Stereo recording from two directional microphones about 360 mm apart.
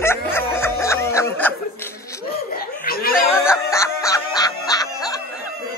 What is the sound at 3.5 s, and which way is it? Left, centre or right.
Music, centre.